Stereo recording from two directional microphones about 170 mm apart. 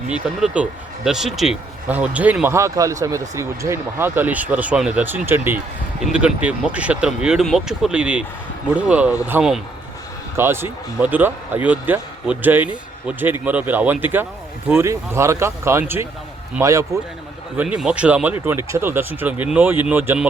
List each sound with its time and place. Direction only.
0.1 s a man's voice: 5° right (ahead or behind)
17.6 s speech: 5° right (ahead or behind)